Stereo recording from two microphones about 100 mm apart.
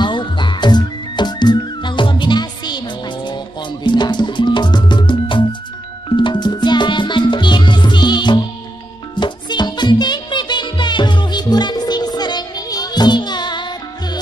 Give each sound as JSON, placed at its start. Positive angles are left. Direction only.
{"t": 0.0, "sound": "music", "side_deg": 50}
{"t": 3.8, "sound": "music", "side_deg": 50}